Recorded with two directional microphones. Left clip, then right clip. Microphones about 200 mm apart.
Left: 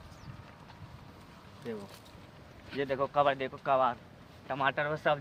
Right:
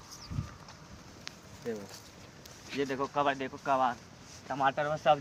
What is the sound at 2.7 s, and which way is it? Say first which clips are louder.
Speech: left 1 dB; 20° left (ahead or behind).